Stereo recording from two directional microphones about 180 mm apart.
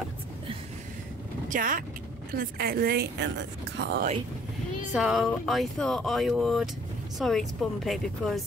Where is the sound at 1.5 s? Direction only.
50° right (ahead or behind); by 4.1 s 65° right (ahead or behind).